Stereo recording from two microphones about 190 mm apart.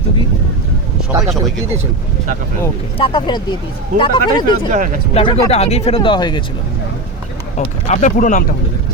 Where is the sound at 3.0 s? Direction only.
25° left (ahead or behind).